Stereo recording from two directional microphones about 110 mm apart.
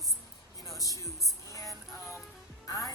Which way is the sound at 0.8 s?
30° left (ahead or behind).